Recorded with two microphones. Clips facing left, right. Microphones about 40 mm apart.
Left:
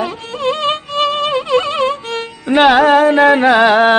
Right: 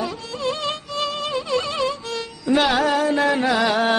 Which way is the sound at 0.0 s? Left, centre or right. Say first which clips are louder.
Left 7 dB; left.